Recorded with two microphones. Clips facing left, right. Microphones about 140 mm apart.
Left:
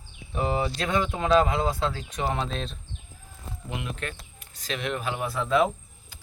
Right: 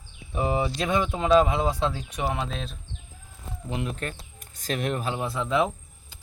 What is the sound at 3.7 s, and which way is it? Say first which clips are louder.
Speech: right 3 dB; 35° right (ahead or behind).